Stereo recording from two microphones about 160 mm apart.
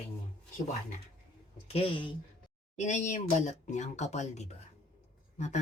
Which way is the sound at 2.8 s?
45° left (ahead or behind).